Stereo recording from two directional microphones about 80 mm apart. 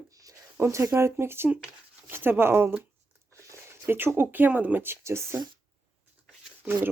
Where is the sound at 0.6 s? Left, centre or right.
Right.